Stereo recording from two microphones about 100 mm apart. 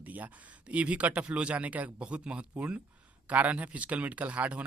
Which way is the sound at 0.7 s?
15° right (ahead or behind).